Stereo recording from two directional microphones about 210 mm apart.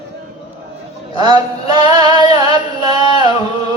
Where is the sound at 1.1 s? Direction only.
20° right (ahead or behind).